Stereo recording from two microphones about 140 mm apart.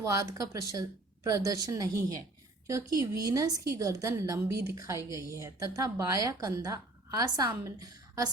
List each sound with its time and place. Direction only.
0.0 s a woman's voice: 25° right (ahead or behind)